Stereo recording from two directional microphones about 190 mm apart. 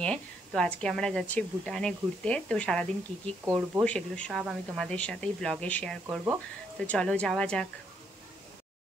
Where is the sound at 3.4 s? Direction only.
10° right (ahead or behind).